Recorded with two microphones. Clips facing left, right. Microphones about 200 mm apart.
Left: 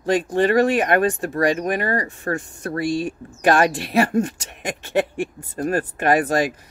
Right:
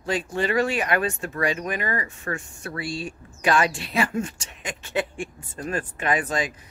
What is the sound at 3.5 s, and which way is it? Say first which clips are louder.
Speech: left 5 dB; 60° left (ahead or behind).